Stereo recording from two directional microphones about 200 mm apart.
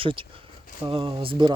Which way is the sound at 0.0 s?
25° right (ahead or behind).